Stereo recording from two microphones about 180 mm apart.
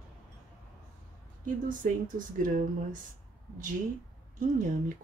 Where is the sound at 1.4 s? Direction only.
45° right (ahead or behind).